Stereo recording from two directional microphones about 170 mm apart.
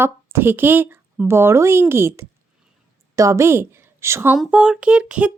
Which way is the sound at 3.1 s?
20° right (ahead or behind).